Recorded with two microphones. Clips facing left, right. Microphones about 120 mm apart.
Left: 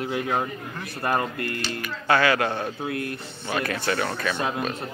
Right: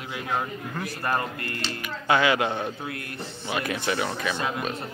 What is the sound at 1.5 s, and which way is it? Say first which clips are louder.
Speech: left 3 dB; 30° right (ahead or behind).